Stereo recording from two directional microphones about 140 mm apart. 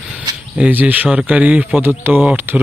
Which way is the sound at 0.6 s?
10° right (ahead or behind).